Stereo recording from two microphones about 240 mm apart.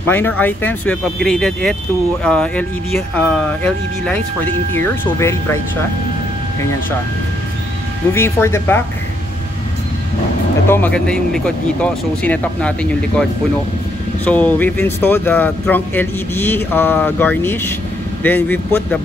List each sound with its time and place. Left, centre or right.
0.1 s speech: centre
8.1 s speech: centre
10.7 s speech: centre
14.2 s speech: centre